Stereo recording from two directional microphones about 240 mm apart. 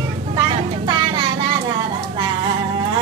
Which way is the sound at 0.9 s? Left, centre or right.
Centre.